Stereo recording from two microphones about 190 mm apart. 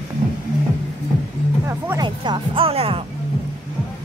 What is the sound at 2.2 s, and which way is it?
Speech, 30° right (ahead or behind).